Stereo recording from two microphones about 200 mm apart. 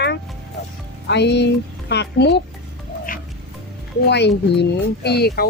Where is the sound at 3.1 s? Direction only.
45° left (ahead or behind).